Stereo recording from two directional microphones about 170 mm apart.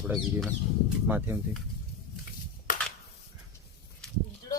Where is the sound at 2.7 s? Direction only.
50° left (ahead or behind).